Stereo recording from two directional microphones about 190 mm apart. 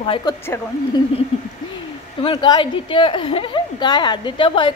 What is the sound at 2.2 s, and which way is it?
A woman's voice, 25° left (ahead or behind).